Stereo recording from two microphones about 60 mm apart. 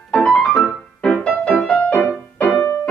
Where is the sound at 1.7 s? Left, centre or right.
Left.